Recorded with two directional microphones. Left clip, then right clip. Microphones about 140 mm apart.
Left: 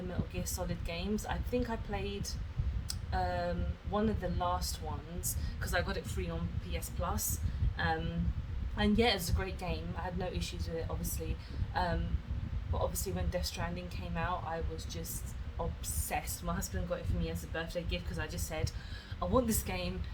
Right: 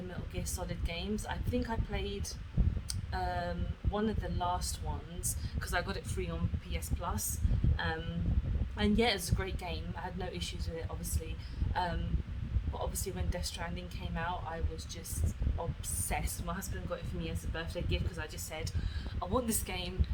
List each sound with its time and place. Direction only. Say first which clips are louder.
0.3 s a woman's voice: right 1 dB; 20° right (ahead or behind)
3.1 s a woman's voice: left 2 dB; 20° right (ahead or behind)
16.0 s a woman's voice: left 1 dB; 15° right (ahead or behind)
19.2 s a woman's voice: left 3 dB; 20° right (ahead or behind)